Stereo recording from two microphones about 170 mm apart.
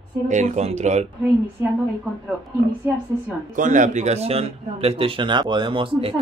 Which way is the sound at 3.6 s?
50° right (ahead or behind).